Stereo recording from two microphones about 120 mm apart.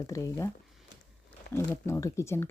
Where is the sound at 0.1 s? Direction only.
25° left (ahead or behind).